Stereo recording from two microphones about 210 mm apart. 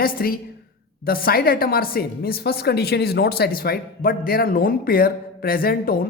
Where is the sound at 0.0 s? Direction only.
45° left (ahead or behind).